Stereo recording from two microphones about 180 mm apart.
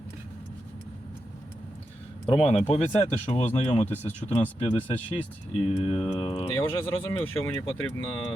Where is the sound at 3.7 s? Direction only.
10° left (ahead or behind).